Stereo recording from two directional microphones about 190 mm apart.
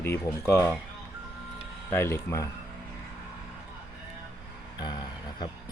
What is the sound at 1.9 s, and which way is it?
Speech, 10° left (ahead or behind).